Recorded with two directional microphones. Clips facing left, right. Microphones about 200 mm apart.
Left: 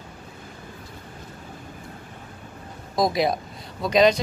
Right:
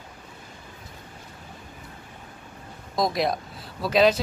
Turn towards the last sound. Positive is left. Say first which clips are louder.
# left 2 dB
turn(degrees=-5)  # may be behind; listen again after turning